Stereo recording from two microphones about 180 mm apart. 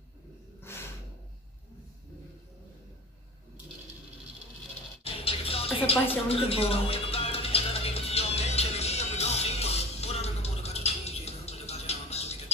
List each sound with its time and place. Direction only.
0.6 s snort: 15° left (ahead or behind)
5.0 s music: 30° left (ahead or behind)